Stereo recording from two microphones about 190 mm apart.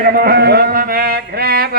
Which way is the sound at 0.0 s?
50° right (ahead or behind).